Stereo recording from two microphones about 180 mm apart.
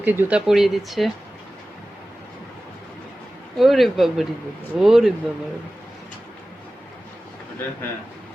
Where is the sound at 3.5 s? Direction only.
Centre (ahead or behind).